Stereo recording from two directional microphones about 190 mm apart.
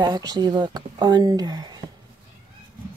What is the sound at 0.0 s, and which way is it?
Speech, 20° right (ahead or behind).